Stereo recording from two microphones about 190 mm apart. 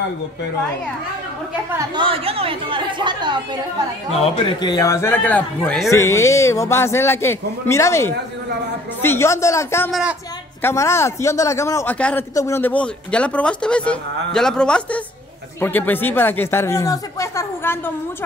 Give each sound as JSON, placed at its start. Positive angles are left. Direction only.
{"t": 2.0, "sound": "a woman's voice", "side_deg": -30}
{"t": 4.2, "sound": "a man's voice", "side_deg": 25}
{"t": 9.8, "sound": "speech", "side_deg": 0}
{"t": 10.6, "sound": "a man's voice", "side_deg": 15}